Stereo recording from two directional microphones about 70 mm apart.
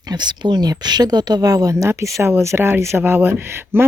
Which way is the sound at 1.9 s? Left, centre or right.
Right.